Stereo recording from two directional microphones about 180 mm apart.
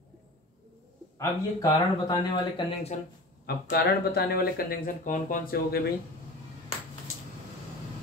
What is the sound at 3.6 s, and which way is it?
Speech, 60° left (ahead or behind).